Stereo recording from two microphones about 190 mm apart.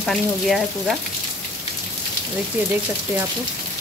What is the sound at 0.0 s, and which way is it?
Speech, centre (ahead or behind).